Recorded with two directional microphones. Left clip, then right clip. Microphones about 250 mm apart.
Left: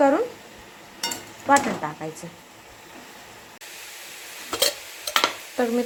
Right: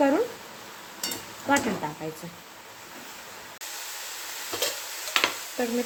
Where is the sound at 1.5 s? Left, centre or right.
Centre.